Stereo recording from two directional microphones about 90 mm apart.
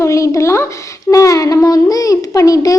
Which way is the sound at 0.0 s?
35° left (ahead or behind).